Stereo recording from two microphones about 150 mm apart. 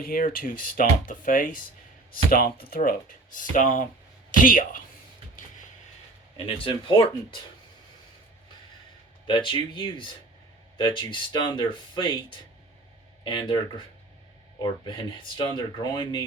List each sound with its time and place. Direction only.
0.0 s speech: 70° left (ahead or behind)
6.3 s speech: 35° left (ahead or behind)
9.2 s speech: 35° left (ahead or behind)